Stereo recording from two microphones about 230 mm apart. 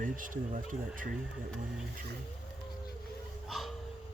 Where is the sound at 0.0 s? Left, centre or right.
Right.